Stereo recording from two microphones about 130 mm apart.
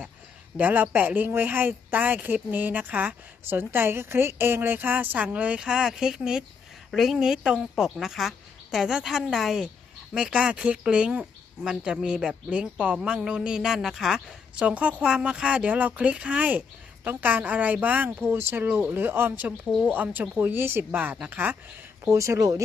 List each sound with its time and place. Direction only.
0.5 s a woman's voice: 15° right (ahead or behind)
19.6 s a woman's voice: centre (ahead or behind)
19.9 s speech: 15° right (ahead or behind)
22.0 s speech: 20° right (ahead or behind)